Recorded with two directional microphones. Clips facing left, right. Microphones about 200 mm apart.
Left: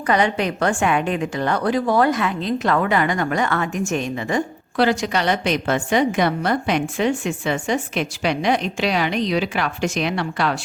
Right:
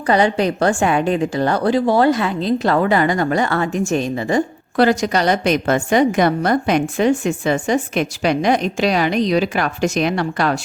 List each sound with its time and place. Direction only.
0.1 s a woman's voice: 35° right (ahead or behind)